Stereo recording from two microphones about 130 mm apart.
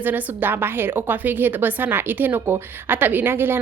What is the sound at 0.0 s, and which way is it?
A woman's voice, 15° right (ahead or behind).